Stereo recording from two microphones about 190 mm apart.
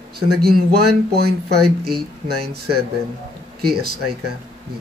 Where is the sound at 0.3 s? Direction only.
55° right (ahead or behind).